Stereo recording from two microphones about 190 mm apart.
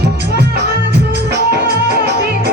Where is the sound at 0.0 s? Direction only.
60° right (ahead or behind).